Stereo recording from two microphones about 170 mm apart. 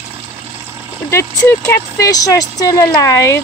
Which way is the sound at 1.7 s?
20° left (ahead or behind).